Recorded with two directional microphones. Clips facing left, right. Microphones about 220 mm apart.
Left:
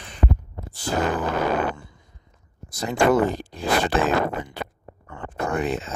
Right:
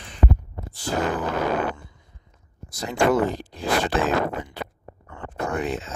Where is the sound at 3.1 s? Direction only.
50° left (ahead or behind).